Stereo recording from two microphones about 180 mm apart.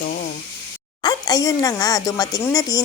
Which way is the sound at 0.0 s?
55° left (ahead or behind).